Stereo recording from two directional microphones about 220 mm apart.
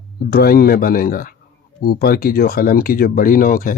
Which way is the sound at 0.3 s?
45° left (ahead or behind).